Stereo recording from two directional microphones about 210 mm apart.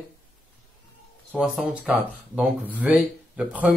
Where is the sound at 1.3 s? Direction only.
Centre (ahead or behind).